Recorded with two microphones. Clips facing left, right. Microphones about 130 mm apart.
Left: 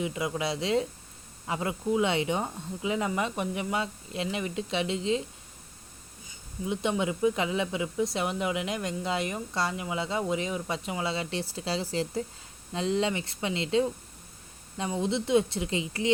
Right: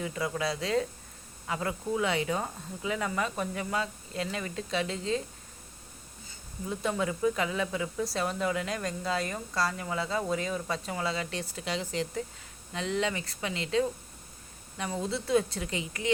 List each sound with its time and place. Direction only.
0.0 s speech: 20° left (ahead or behind)
6.2 s speech: 15° left (ahead or behind)
15.0 s speech: 20° left (ahead or behind)